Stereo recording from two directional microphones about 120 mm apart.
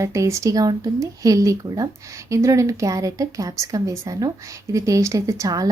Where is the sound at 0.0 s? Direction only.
25° right (ahead or behind).